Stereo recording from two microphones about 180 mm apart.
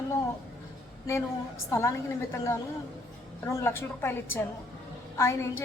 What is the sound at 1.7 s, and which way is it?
Speech, 15° left (ahead or behind).